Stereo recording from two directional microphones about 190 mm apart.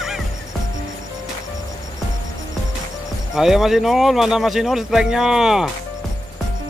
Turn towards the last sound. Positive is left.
turn(degrees=-5)  # may be behind; listen again after turning